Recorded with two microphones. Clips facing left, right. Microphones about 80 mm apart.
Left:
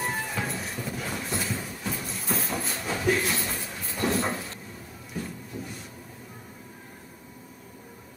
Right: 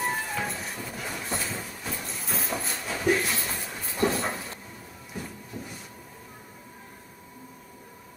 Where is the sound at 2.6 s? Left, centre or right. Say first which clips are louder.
Right 2 dB; centre.